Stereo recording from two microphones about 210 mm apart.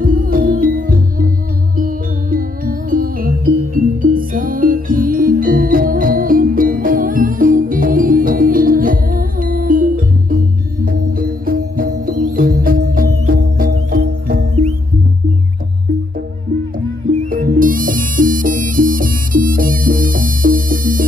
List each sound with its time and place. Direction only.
0.0 s music: 40° right (ahead or behind)
17.3 s music: 45° right (ahead or behind)